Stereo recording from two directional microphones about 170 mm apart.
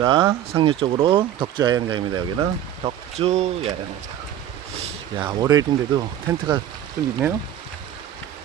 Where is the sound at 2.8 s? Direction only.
35° right (ahead or behind).